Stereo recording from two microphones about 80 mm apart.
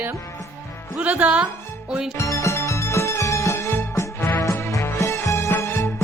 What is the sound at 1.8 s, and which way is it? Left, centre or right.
Music, centre.